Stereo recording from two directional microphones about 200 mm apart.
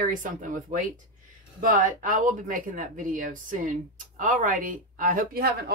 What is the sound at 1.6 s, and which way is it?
Speech, 40° right (ahead or behind).